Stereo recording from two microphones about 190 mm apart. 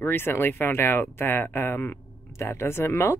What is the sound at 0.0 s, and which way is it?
Speech, 10° left (ahead or behind).